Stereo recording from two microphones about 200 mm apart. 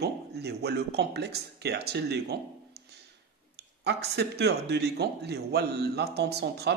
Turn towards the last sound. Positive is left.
turn(degrees=-55)  # may be behind; listen again after turning